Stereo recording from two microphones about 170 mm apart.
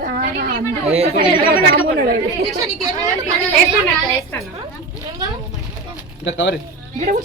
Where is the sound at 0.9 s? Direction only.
35° right (ahead or behind).